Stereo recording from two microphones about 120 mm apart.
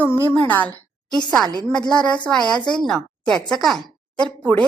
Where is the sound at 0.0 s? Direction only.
15° left (ahead or behind).